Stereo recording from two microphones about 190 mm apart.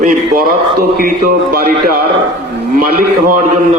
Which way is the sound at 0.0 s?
50° right (ahead or behind).